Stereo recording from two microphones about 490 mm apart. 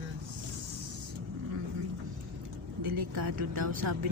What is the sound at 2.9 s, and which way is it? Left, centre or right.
A woman's voice, right.